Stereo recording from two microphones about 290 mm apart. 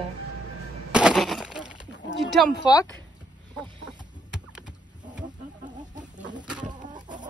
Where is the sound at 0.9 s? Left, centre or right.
Centre.